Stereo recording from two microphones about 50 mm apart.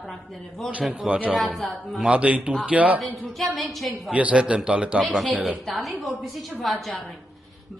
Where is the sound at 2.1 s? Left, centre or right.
Right.